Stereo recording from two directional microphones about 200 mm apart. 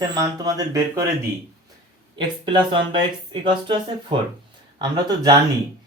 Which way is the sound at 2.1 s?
20° right (ahead or behind).